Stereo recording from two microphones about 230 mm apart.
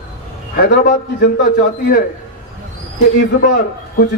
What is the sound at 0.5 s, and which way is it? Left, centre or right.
A man's voice, left.